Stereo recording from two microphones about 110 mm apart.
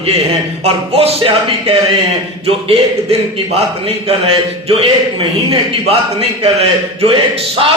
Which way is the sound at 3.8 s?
60° right (ahead or behind).